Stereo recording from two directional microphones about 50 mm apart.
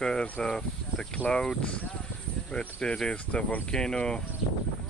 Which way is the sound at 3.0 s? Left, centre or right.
Centre.